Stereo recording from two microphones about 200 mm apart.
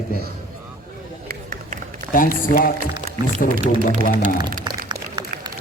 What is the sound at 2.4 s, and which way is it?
Mantra, 45° left (ahead or behind).